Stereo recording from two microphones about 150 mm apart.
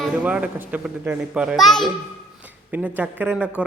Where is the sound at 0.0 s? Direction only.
5° right (ahead or behind).